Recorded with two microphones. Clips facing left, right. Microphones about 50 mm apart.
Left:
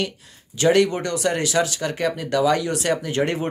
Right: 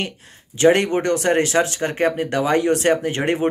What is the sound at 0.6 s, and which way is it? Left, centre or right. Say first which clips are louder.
Speech: right 2 dB; right.